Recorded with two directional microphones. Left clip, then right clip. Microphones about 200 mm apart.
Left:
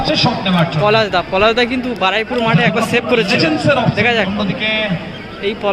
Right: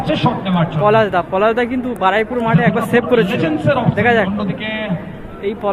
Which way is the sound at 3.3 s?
50° left (ahead or behind).